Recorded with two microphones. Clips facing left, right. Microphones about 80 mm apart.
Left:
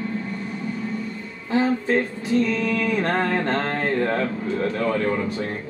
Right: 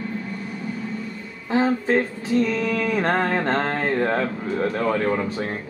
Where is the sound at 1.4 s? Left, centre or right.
Right.